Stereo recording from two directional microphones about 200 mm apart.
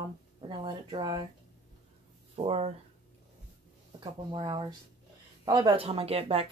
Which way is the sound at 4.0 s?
25° right (ahead or behind).